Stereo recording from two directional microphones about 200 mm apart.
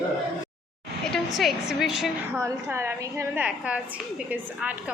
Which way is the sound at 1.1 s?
Centre (ahead or behind).